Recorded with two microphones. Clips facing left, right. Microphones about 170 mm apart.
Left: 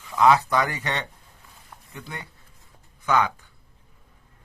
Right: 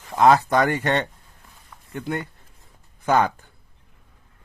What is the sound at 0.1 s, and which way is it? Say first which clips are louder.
Speech: right 2 dB; 50° right (ahead or behind).